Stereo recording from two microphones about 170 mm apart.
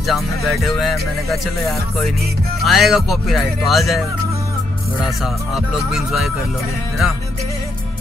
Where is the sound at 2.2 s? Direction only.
65° right (ahead or behind).